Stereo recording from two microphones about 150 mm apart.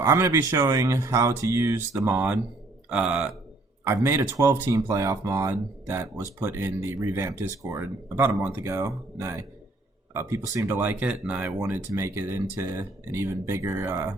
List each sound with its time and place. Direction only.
0.0 s speech: 15° right (ahead or behind)